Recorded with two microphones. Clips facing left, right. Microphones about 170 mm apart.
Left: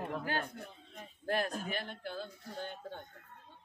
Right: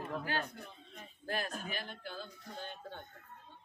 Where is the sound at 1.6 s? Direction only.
55° left (ahead or behind).